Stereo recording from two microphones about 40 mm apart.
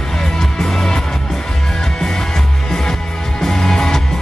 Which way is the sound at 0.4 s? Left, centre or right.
Centre.